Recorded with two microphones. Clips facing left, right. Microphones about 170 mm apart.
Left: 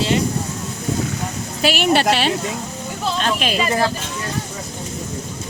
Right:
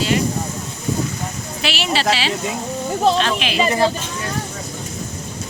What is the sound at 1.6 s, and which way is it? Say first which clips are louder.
Speech: left 4 dB; 50° left (ahead or behind).